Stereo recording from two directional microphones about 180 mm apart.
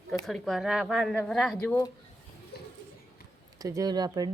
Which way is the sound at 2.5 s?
60° left (ahead or behind).